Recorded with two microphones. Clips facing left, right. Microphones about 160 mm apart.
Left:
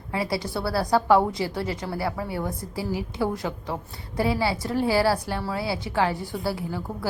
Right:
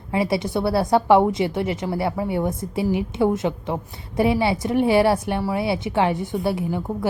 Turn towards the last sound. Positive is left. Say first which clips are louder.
# right 6 dB
turn(degrees=-20)  # may be behind; listen again after turning